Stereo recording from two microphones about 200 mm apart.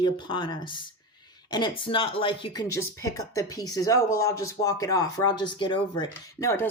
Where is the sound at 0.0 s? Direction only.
25° left (ahead or behind).